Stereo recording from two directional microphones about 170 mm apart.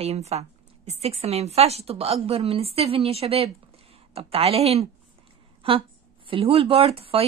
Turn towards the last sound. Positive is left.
turn(degrees=-35)  # may be behind; listen again after turning